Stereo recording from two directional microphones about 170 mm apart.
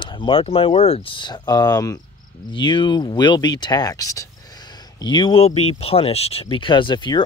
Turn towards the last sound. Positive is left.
turn(degrees=25)  # may be behind; listen again after turning